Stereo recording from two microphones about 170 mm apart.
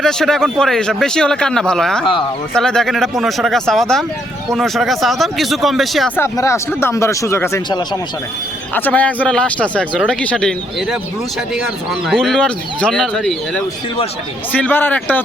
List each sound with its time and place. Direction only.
0.0 s speech: centre (ahead or behind)
6.1 s a man's voice: 15° left (ahead or behind)
8.7 s a man's voice: 10° left (ahead or behind)